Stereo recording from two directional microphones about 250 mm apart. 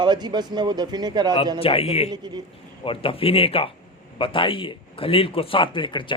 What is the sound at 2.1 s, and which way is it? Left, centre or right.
Speech, centre.